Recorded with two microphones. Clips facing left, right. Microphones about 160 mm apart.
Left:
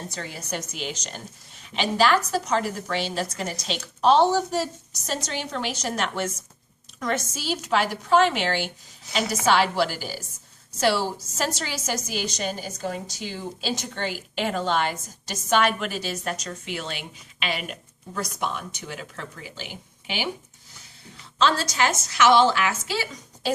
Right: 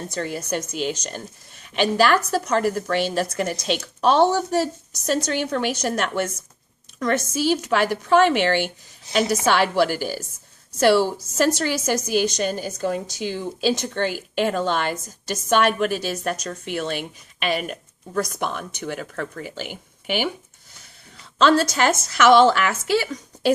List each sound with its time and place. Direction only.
0.1 s a woman's voice: 50° right (ahead or behind)
21.3 s a woman's voice: 55° right (ahead or behind)